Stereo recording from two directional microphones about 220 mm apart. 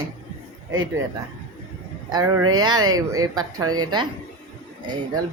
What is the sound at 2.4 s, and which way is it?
Speech, 70° right (ahead or behind).